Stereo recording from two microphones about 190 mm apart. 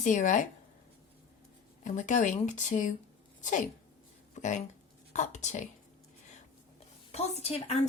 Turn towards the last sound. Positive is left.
turn(degrees=35)  # may be behind; listen again after turning